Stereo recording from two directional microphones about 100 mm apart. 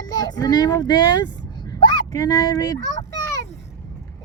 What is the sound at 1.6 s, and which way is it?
Dog, 50° left (ahead or behind).